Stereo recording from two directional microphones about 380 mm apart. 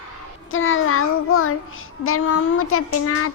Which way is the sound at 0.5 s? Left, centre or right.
Left.